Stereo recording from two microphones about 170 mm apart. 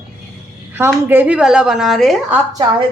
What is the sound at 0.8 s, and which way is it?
A woman's voice, 10° right (ahead or behind).